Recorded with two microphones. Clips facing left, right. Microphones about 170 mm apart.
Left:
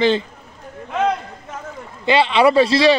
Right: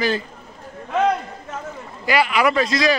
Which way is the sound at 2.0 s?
25° left (ahead or behind).